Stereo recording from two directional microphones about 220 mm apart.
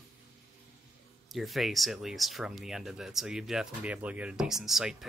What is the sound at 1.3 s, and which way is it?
Speech, centre (ahead or behind).